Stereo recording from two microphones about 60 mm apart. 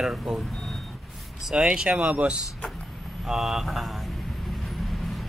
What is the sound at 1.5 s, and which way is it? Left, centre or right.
Speech, centre.